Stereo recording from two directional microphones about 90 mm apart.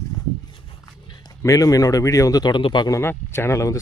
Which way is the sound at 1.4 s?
40° left (ahead or behind).